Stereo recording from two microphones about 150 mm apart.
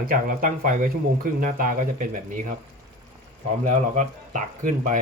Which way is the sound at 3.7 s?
50° right (ahead or behind).